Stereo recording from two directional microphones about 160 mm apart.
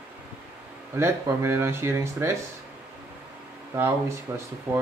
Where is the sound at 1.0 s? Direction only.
15° right (ahead or behind).